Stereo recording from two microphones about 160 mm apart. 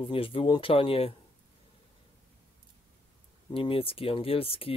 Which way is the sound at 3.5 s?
35° left (ahead or behind).